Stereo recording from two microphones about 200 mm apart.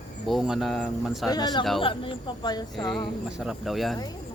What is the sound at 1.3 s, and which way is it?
Speech, 20° left (ahead or behind).